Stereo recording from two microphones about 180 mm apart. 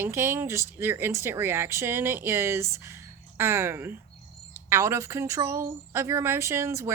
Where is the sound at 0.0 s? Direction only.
15° right (ahead or behind).